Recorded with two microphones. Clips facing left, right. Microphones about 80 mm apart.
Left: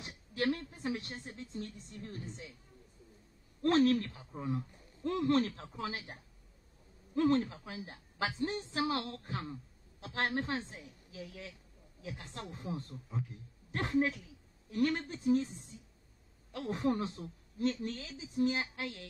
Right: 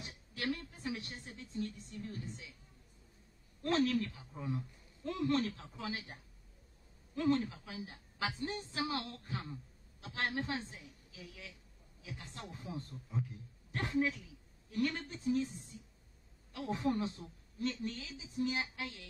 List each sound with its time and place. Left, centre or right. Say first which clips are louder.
0.4 s a woman's voice: left 5 dB; left
3.6 s a man's voice: left 5 dB; left
7.2 s a woman's voice: left 3 dB; left
13.8 s a woman's voice: left 3 dB; left
16.5 s a woman's voice: left 2 dB; left